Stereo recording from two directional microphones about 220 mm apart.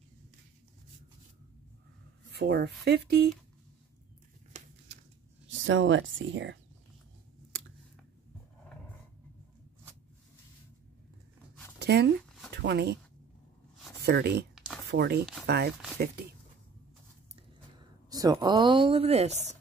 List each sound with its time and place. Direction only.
2.3 s speech: 45° right (ahead or behind)
5.5 s speech: 60° right (ahead or behind)
11.8 s a sound: 50° right (ahead or behind)
12.6 s speech: 50° right (ahead or behind)
14.0 s speech: 50° right (ahead or behind)
18.1 s speech: 15° right (ahead or behind)